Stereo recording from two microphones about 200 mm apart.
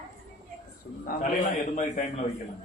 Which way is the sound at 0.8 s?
55° left (ahead or behind).